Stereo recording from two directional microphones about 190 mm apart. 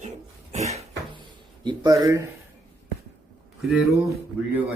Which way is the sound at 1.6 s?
20° right (ahead or behind).